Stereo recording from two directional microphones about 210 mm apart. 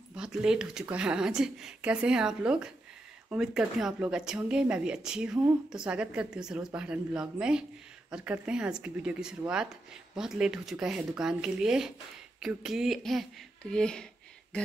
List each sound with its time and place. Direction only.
0.1 s a woman's voice: 5° right (ahead or behind)